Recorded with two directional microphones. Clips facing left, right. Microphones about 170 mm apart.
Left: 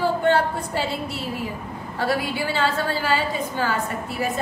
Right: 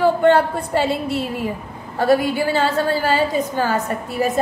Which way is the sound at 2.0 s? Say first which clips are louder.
Right 8 dB; 45° right (ahead or behind).